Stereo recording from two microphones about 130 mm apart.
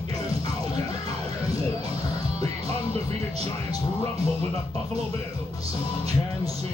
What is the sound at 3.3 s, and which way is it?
Music, 50° right (ahead or behind).